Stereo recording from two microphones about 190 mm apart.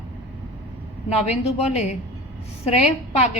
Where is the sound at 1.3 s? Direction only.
35° left (ahead or behind).